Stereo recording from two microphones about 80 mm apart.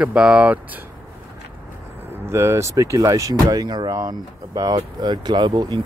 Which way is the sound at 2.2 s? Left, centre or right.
Right.